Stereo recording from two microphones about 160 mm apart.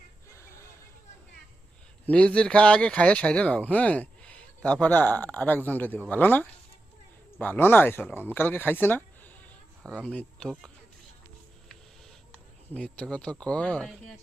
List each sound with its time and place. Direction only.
0.3 s a sound: 15° left (ahead or behind)
2.0 s speech: 5° left (ahead or behind)
12.3 s speech: 10° left (ahead or behind)